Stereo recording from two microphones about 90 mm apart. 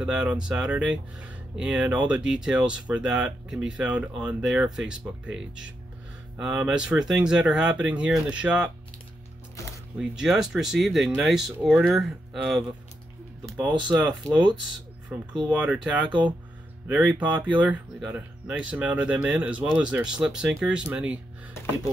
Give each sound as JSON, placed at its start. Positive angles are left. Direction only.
{"t": 0.0, "sound": "speech", "side_deg": -10}
{"t": 9.9, "sound": "speech", "side_deg": -5}
{"t": 13.7, "sound": "speech", "side_deg": -60}
{"t": 13.9, "sound": "speech", "side_deg": 5}
{"t": 15.4, "sound": "speech", "side_deg": -15}
{"t": 16.8, "sound": "speech", "side_deg": -20}